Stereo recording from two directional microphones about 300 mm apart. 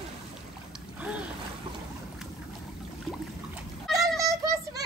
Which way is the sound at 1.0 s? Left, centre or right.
Centre.